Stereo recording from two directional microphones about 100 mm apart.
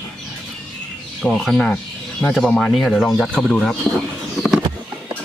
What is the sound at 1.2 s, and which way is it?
Speech, centre (ahead or behind).